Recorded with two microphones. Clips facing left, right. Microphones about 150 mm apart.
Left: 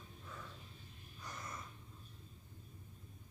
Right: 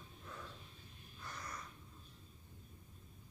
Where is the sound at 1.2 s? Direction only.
20° left (ahead or behind).